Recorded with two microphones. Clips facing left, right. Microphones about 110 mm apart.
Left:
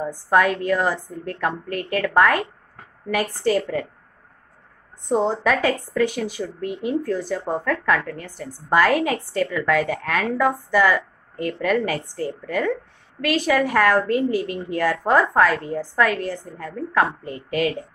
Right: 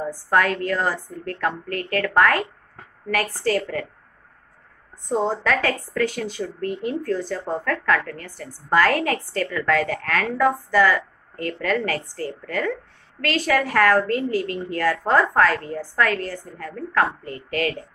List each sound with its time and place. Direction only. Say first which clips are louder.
0.0 s a woman's voice: left 2 dB; 15° left (ahead or behind)
5.0 s a woman's voice: left 2 dB; 20° left (ahead or behind)